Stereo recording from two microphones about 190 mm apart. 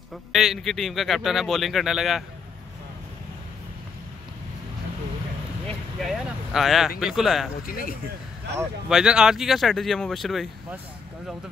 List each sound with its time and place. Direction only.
0.1 s speech: centre (ahead or behind)
6.0 s vehicle: centre (ahead or behind)
7.0 s speech: centre (ahead or behind)
7.6 s speech: 50° left (ahead or behind)
8.5 s speech: 5° right (ahead or behind)